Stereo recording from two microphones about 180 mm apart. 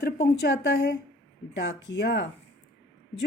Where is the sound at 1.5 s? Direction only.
85° left.